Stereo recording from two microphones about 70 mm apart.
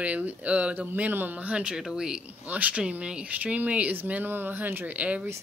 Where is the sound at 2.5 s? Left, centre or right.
Right.